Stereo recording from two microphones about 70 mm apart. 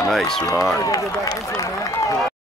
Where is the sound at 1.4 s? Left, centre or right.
Left.